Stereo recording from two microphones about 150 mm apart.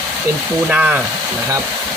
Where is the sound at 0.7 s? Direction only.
10° right (ahead or behind).